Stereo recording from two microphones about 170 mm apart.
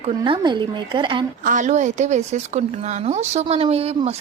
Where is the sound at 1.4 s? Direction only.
50° right (ahead or behind).